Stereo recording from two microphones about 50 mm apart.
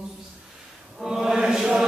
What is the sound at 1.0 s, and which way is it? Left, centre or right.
Chant, centre.